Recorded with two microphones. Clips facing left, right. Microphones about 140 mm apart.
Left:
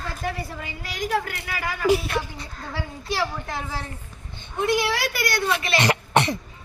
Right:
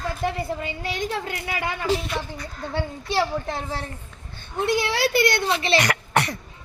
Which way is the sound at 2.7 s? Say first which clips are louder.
Right 4 dB; 25° right (ahead or behind).